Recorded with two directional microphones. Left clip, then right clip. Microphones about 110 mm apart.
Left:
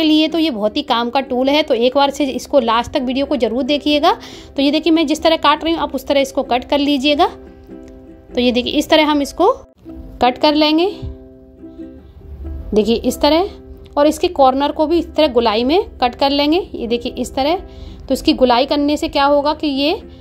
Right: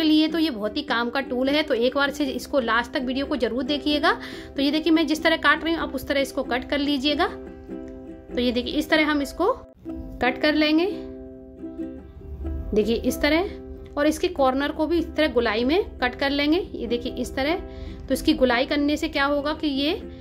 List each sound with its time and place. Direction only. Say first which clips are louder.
0.0 s a woman's voice: left 7 dB; 50° left (ahead or behind)
8.4 s speech: left 9 dB; 60° left (ahead or behind)
10.1 s a woman's voice: left 8 dB; 45° left (ahead or behind)
12.7 s a woman's voice: left 7 dB; 45° left (ahead or behind)